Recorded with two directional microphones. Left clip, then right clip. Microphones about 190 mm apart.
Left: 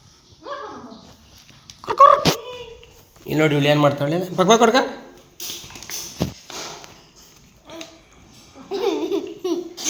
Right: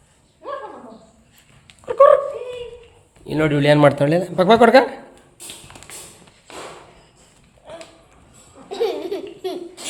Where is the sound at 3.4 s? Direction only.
30° right (ahead or behind); by 4.1 s 45° right (ahead or behind).